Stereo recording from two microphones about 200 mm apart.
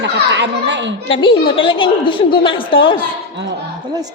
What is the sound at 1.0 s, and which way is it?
A woman's voice, 25° left (ahead or behind).